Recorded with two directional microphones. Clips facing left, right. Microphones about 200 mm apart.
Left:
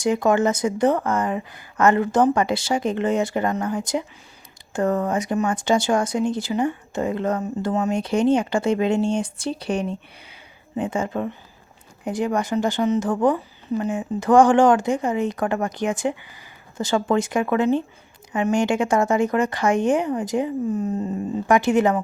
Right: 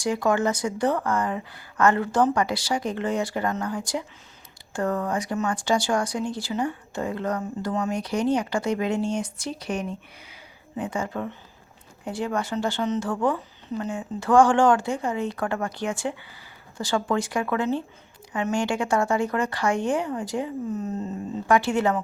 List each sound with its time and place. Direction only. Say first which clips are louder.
0.0 s speech: left 4 dB; 20° left (ahead or behind)